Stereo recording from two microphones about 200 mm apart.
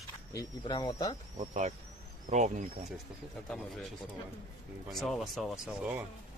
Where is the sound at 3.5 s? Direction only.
5° left (ahead or behind).